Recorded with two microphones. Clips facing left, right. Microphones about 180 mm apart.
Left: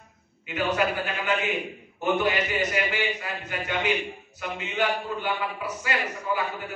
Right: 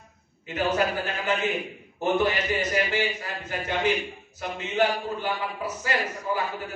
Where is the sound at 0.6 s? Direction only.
40° right (ahead or behind).